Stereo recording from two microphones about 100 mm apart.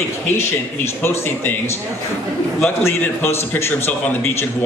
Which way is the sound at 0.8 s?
25° left (ahead or behind).